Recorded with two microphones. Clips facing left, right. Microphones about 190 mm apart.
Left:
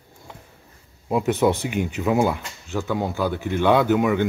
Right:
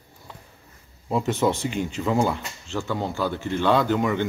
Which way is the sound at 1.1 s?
15° left (ahead or behind).